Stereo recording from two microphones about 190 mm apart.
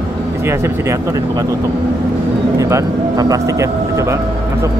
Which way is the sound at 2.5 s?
15° right (ahead or behind).